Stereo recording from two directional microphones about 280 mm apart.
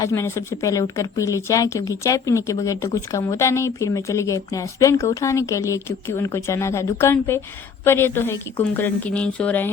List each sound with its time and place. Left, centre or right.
0.0 s speech: centre